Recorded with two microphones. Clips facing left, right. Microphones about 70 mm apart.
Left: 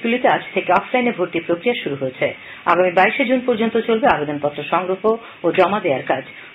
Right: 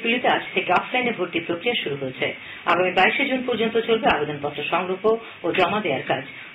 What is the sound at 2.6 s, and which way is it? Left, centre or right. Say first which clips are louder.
A woman's voice: left 5 dB; left.